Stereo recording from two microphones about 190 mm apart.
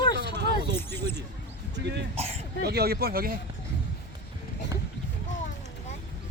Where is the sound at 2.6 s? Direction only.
55° right (ahead or behind).